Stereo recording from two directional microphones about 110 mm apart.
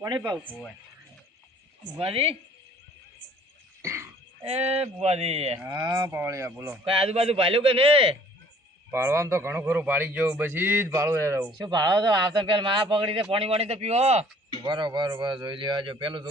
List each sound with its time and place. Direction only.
2.0 s a man's voice: 60° right (ahead or behind)
4.4 s speech: 70° right (ahead or behind)
5.9 s a man's voice: 25° right (ahead or behind)
6.8 s a man's voice: 60° right (ahead or behind)
8.9 s a man's voice: 20° right (ahead or behind)
11.5 s speech: 40° right (ahead or behind)
13.3 s speech: 65° right (ahead or behind)
14.6 s speech: 45° right (ahead or behind)